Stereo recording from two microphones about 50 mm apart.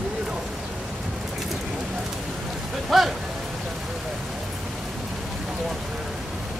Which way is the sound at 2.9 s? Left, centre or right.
Centre.